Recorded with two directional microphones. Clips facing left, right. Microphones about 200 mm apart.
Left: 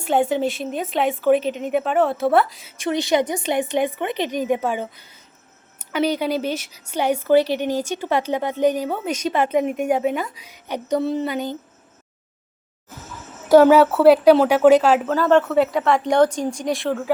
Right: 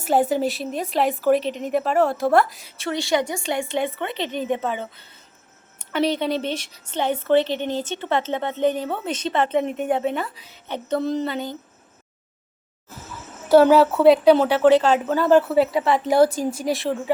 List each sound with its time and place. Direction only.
0.0 s a woman's voice: 5° right (ahead or behind)
2.7 s a woman's voice: 20° left (ahead or behind)
5.8 s a sound: 5° left (ahead or behind)
6.9 s a woman's voice: 10° left (ahead or behind)
13.5 s a woman's voice: 10° left (ahead or behind)